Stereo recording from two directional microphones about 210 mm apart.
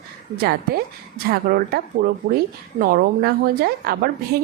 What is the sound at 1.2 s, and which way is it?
A woman's voice, 45° right (ahead or behind).